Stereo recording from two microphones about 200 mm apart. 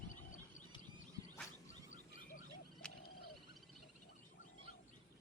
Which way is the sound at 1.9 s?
40° left (ahead or behind).